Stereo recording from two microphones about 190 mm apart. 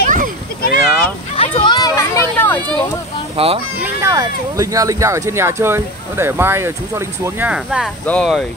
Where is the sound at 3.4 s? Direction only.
30° right (ahead or behind).